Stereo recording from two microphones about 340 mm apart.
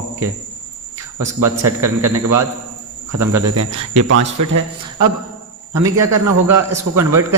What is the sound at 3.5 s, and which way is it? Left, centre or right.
Speech, right.